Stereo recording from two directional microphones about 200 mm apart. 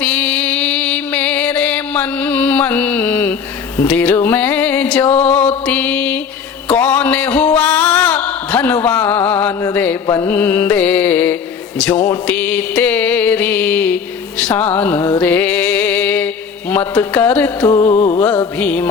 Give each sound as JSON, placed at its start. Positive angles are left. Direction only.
{"t": 0.0, "sound": "music", "side_deg": 5}
{"t": 10.1, "sound": "mantra", "side_deg": 15}
{"t": 11.8, "sound": "speech", "side_deg": 5}
{"t": 12.2, "sound": "a sound", "side_deg": 5}
{"t": 17.7, "sound": "mantra", "side_deg": 15}
{"t": 17.9, "sound": "music", "side_deg": 35}
{"t": 18.5, "sound": "mantra", "side_deg": 10}